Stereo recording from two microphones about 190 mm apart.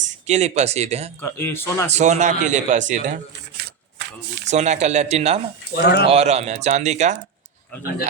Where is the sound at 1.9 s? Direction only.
35° right (ahead or behind).